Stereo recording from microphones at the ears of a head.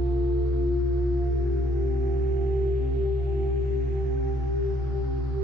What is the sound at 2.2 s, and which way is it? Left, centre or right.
Singing bowl, right.